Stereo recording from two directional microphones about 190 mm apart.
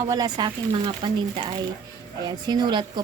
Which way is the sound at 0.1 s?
20° right (ahead or behind).